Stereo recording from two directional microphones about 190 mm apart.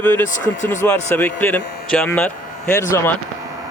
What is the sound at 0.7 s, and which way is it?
Speech, 10° left (ahead or behind).